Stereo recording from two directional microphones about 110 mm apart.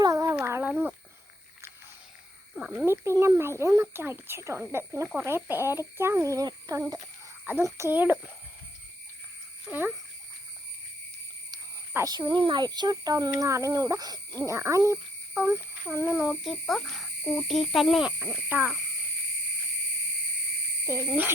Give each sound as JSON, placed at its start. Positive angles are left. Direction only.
{"t": 0.0, "sound": "a sound", "side_deg": -30}
{"t": 2.7, "sound": "speech", "side_deg": -25}
{"t": 9.7, "sound": "speech", "side_deg": -10}
{"t": 12.0, "sound": "speech", "side_deg": -40}
{"t": 16.3, "sound": "speech", "side_deg": 0}
{"t": 18.2, "sound": "speech", "side_deg": -15}
{"t": 20.9, "sound": "speech", "side_deg": -25}